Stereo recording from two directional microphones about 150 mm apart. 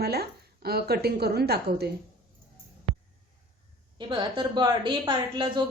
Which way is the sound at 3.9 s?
30° right (ahead or behind).